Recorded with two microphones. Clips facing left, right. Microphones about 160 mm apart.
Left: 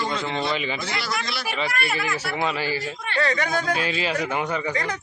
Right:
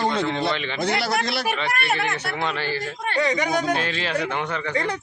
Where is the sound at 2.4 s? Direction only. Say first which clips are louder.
Left 2 dB; 10° left (ahead or behind).